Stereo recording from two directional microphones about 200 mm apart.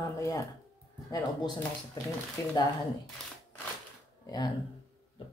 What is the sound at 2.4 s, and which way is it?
Speech, 15° left (ahead or behind).